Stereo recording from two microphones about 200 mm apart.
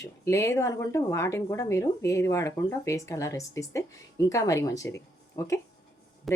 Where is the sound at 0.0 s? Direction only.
15° left (ahead or behind).